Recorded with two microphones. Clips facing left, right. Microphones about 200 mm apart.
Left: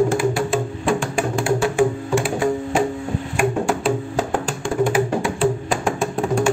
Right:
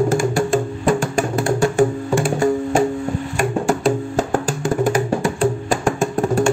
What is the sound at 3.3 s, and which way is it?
Music, centre (ahead or behind).